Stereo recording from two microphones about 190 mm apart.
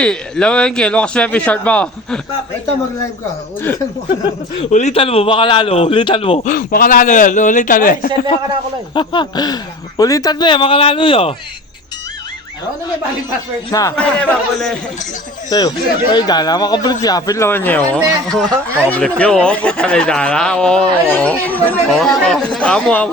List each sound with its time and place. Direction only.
0.0 s a man's voice: 5° left (ahead or behind)
4.7 s a man's voice: 35° left (ahead or behind)
9.0 s speech: 25° left (ahead or behind)
13.7 s speech: 20° left (ahead or behind)
13.9 s a man's voice: 5° left (ahead or behind)
15.4 s a man's voice: 20° left (ahead or behind)